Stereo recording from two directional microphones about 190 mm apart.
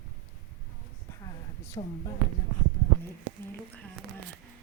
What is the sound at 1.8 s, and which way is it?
Speech, 35° left (ahead or behind).